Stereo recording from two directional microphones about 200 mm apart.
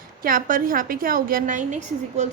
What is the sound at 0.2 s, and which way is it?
A woman's voice, 45° right (ahead or behind).